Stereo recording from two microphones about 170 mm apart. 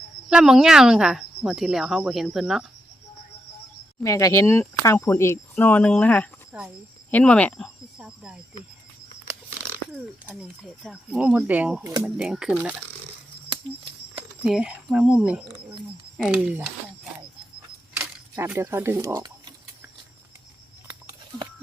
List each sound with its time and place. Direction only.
0.3 s speech: 5° right (ahead or behind)
4.0 s speech: 20° left (ahead or behind)
6.5 s speech: 5° right (ahead or behind)
7.1 s speech: 10° left (ahead or behind)
10.2 s speech: 5° right (ahead or behind)
11.8 s speech: 20° right (ahead or behind)
12.0 s speech: 5° right (ahead or behind)
13.5 s a sound: 30° right (ahead or behind)
14.4 s speech: centre (ahead or behind)
17.9 s a sound: 10° right (ahead or behind)